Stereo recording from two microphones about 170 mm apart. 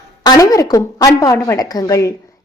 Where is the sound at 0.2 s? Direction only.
20° left (ahead or behind).